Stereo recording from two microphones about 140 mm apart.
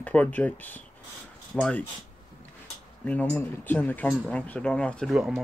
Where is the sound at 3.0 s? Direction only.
10° left (ahead or behind).